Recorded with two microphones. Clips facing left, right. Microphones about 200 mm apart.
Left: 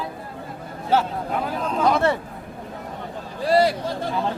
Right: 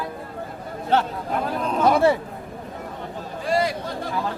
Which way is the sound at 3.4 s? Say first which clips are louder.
Left 4 dB; 35° left (ahead or behind).